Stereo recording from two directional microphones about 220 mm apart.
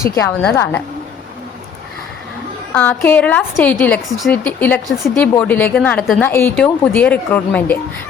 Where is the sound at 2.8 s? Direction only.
5° left (ahead or behind).